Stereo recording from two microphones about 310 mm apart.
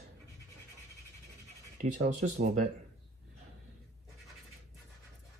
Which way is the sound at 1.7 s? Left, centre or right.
Right.